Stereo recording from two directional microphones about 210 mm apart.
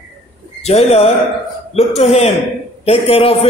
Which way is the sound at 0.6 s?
30° left (ahead or behind).